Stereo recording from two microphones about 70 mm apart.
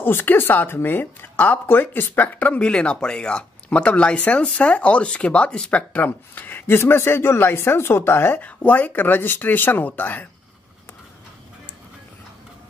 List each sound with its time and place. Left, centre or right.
0.0 s speech: left
8.4 s speech: left